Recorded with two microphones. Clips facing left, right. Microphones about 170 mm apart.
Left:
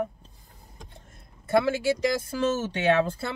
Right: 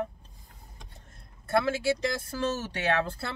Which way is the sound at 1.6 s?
20° left (ahead or behind).